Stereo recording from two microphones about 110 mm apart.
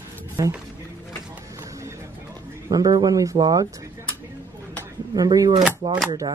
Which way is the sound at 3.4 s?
45° right (ahead or behind).